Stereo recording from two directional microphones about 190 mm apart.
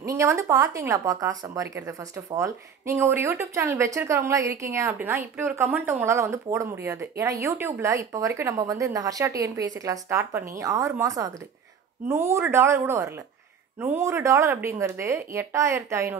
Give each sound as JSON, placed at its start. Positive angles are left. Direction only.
{"t": 0.0, "sound": "speech", "side_deg": -15}